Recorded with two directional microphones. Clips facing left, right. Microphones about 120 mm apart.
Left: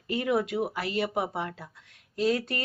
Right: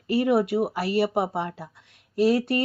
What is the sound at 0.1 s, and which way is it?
Speech, 30° right (ahead or behind).